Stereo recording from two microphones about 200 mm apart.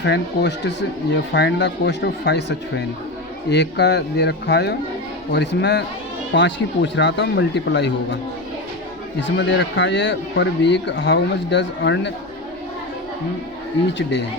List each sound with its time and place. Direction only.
0.0 s speech: 60° left (ahead or behind)
9.4 s speech: 60° left (ahead or behind)